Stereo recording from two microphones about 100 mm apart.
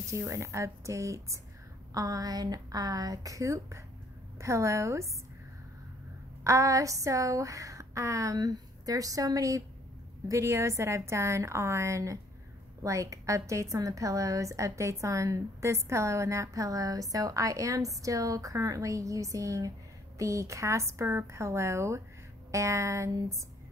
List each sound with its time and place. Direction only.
0.0 s a woman's voice: 30° right (ahead or behind)
6.4 s a woman's voice: 30° right (ahead or behind)